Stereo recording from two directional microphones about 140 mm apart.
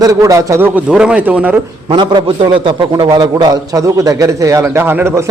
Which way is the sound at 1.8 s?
35° right (ahead or behind).